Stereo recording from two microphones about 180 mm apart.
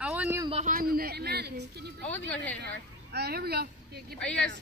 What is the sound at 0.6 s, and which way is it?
Speech, 55° right (ahead or behind).